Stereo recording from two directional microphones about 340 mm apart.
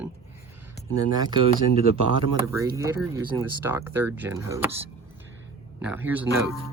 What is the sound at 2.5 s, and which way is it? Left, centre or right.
Speech, centre.